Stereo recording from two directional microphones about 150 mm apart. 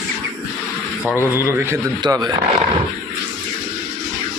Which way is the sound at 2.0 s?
25° right (ahead or behind).